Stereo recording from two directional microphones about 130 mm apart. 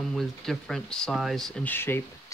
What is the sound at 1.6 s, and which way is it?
Speech, 15° left (ahead or behind).